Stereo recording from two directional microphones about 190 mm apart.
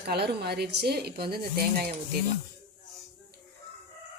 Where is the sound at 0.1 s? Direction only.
60° right (ahead or behind).